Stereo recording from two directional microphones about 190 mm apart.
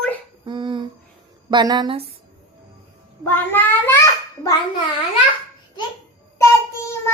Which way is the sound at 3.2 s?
10° left (ahead or behind).